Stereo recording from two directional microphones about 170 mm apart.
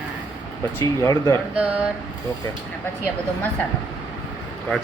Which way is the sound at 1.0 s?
20° left (ahead or behind).